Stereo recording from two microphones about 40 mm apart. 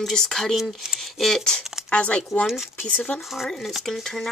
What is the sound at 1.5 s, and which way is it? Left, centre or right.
Speech, left.